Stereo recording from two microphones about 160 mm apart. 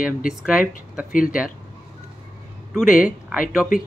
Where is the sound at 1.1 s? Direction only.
60° left (ahead or behind).